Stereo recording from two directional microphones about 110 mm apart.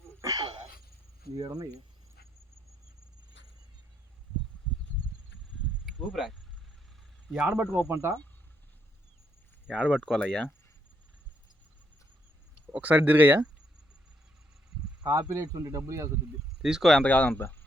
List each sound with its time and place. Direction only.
0.2 s a sound: 30° right (ahead or behind)
1.4 s speech: 40° right (ahead or behind)
5.8 s a sound: centre (ahead or behind)
7.3 s speech: 15° right (ahead or behind)
9.6 s speech: centre (ahead or behind)
12.7 s speech: 15° right (ahead or behind)
15.0 s speech: 30° right (ahead or behind)
16.6 s speech: 5° right (ahead or behind)
17.0 s speech: 15° left (ahead or behind)